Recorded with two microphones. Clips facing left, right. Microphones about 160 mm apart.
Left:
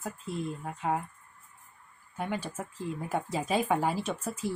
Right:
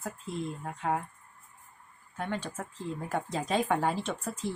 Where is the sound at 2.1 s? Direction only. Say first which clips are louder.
Left 1 dB; 10° left (ahead or behind).